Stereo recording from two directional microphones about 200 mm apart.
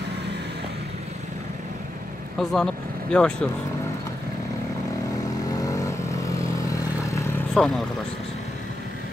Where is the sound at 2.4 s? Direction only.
5° left (ahead or behind).